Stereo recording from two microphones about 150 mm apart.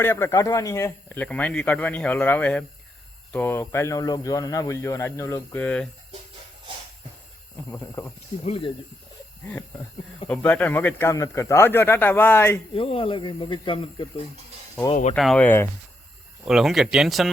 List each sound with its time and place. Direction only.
0.0 s speech: 15° left (ahead or behind)
7.7 s speech: 20° left (ahead or behind)
8.4 s speech: 35° left (ahead or behind)
10.2 s speech: 10° left (ahead or behind)
12.7 s speech: 40° left (ahead or behind)
15.1 s speech: 5° left (ahead or behind)
15.4 s speech: 15° left (ahead or behind)
16.5 s speech: centre (ahead or behind)